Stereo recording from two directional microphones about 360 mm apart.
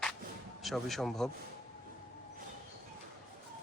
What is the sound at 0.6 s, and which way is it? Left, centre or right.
Speech, centre.